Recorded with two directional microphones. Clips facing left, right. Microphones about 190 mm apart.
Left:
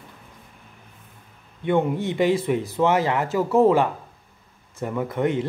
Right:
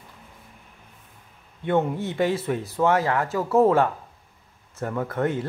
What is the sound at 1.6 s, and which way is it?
Speech, 10° left (ahead or behind).